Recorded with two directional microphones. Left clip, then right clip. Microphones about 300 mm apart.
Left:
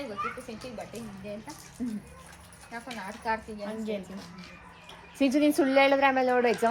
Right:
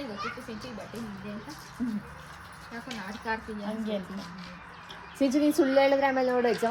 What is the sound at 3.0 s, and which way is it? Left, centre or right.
Speech, centre.